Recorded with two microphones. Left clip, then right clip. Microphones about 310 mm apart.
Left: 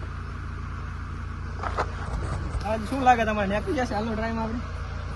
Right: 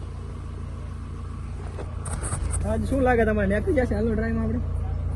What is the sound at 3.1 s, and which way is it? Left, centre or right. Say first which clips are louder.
Speech: left 3 dB; right.